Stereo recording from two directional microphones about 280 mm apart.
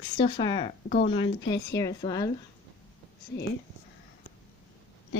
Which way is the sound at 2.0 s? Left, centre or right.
Centre.